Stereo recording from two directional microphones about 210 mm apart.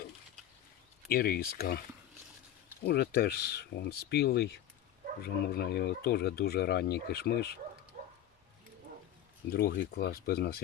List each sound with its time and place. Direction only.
1.0 s speech: 45° left (ahead or behind)
2.8 s speech: 50° left (ahead or behind)
7.9 s a sound: 35° right (ahead or behind)
9.5 s speech: 50° left (ahead or behind)